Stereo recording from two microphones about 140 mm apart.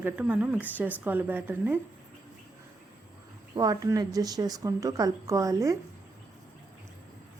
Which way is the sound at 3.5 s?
25° right (ahead or behind).